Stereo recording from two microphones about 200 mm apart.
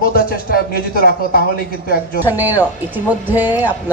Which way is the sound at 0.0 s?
50° left (ahead or behind).